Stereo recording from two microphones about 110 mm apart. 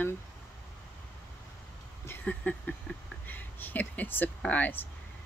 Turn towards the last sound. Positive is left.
turn(degrees=15)  # may be behind; listen again after turning